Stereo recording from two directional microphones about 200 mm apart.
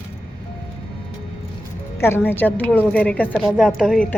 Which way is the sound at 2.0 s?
10° left (ahead or behind).